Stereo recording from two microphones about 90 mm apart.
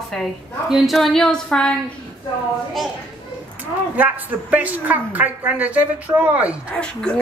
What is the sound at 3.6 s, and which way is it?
A woman's voice, 20° right (ahead or behind).